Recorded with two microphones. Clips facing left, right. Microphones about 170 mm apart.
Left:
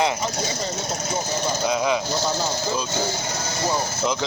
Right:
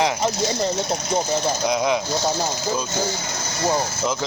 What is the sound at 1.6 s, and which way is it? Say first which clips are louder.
Speech: even; 10° right (ahead or behind).